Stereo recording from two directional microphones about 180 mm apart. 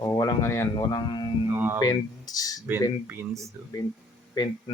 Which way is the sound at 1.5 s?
10° right (ahead or behind).